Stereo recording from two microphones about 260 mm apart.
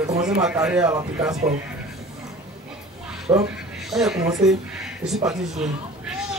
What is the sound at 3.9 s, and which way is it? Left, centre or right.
Speech, centre.